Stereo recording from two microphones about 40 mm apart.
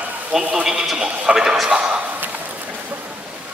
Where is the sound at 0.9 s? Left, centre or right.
Right.